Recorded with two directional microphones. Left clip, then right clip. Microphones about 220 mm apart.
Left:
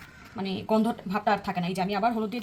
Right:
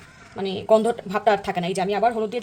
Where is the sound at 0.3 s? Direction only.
30° right (ahead or behind).